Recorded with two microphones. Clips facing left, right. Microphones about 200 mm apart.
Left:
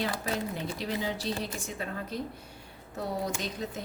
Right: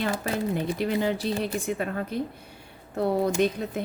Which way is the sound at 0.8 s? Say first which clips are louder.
Right 6 dB; 55° right (ahead or behind).